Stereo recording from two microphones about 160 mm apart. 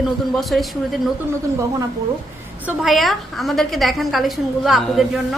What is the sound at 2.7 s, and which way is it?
A woman's voice, centre (ahead or behind).